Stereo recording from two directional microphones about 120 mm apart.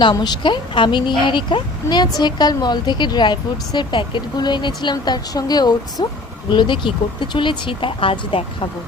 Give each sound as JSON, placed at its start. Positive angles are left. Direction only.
{"t": 0.0, "sound": "speech", "side_deg": 40}